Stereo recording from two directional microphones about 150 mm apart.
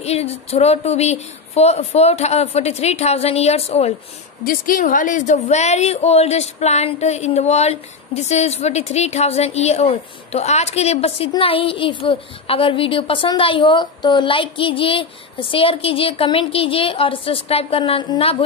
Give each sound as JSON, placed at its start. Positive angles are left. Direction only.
{"t": 0.0, "sound": "speech", "side_deg": 45}
{"t": 4.5, "sound": "a woman's voice", "side_deg": 65}